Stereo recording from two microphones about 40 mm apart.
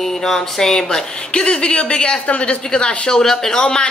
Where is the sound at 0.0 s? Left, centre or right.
Centre.